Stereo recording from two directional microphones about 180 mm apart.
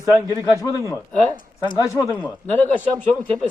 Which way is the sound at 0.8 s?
15° left (ahead or behind).